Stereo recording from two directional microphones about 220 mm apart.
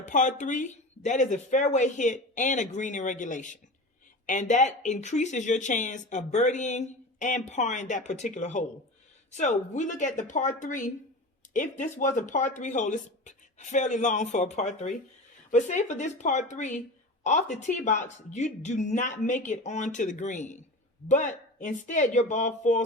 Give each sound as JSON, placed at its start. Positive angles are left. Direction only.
{"t": 0.0, "sound": "speech", "side_deg": 35}